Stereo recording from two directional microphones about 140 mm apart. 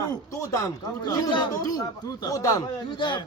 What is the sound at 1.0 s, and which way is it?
A man's voice, 30° left (ahead or behind).